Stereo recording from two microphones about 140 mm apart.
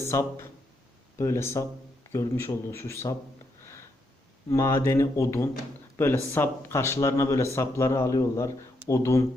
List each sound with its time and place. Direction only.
0.0 s a man's voice: 20° left (ahead or behind)
4.4 s a man's voice: 20° left (ahead or behind)